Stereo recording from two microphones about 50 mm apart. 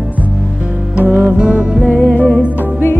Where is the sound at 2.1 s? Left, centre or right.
Left.